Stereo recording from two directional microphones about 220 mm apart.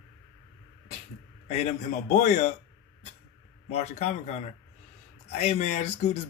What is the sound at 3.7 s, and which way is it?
A man's voice, 30° left (ahead or behind).